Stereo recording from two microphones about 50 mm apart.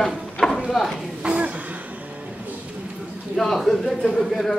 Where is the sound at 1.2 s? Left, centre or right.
Right.